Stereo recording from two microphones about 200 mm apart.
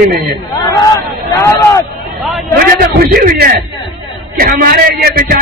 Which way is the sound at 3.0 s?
50° right (ahead or behind).